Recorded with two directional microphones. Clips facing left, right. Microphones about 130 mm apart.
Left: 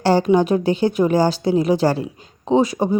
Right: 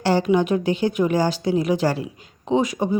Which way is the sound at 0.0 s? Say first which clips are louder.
Left 3 dB; 35° left (ahead or behind).